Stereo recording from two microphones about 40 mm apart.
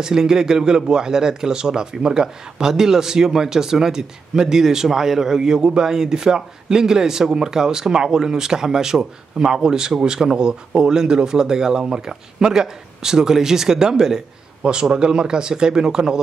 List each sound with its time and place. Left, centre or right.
0.0 s speech: centre